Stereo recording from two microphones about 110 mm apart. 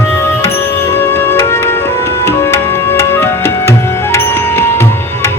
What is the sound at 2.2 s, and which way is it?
Tabla, 20° left (ahead or behind).